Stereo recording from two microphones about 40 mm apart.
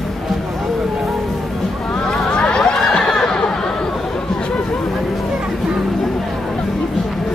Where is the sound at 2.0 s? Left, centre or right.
Centre.